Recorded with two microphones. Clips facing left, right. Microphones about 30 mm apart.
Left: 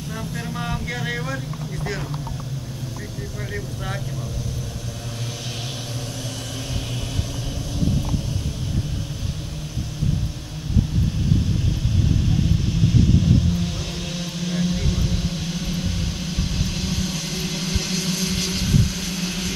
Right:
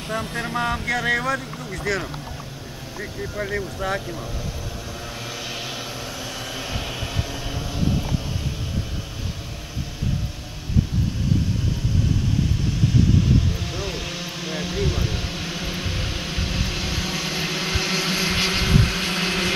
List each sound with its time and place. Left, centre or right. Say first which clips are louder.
0.1 s vehicle: right 5 dB; right
13.2 s vehicle: left 2 dB; centre; by 19.5 s right